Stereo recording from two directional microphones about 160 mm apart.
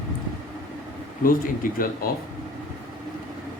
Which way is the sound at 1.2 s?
60° left (ahead or behind).